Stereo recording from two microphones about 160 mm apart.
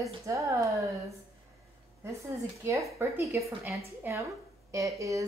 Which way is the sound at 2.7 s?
20° right (ahead or behind).